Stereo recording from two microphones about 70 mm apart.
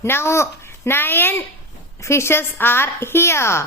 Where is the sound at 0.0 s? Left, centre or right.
Left.